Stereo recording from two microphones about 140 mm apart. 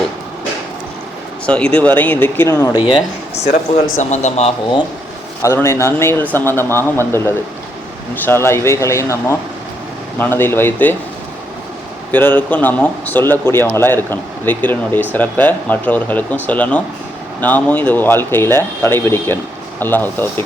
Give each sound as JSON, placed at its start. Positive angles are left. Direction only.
{"t": 1.5, "sound": "speech", "side_deg": 10}
{"t": 4.1, "sound": "speech", "side_deg": 50}
{"t": 5.4, "sound": "speech", "side_deg": 20}
{"t": 12.1, "sound": "speech", "side_deg": 15}